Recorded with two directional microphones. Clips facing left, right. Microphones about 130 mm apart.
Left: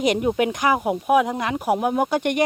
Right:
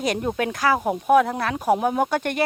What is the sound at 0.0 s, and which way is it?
Speech, 15° left (ahead or behind).